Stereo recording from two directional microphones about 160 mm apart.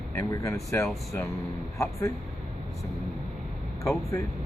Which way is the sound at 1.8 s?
15° left (ahead or behind).